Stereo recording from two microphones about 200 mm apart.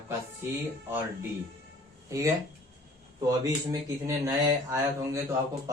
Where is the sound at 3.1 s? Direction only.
15° right (ahead or behind).